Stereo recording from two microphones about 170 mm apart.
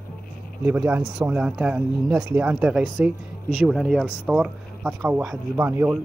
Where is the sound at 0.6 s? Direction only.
10° right (ahead or behind).